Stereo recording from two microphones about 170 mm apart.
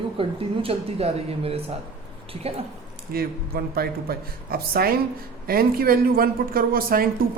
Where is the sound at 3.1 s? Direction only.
60° right (ahead or behind).